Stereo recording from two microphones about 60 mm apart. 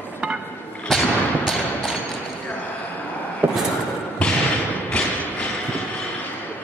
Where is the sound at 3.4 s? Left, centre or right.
Right.